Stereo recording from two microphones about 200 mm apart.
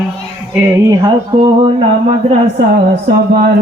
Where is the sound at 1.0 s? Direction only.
25° right (ahead or behind).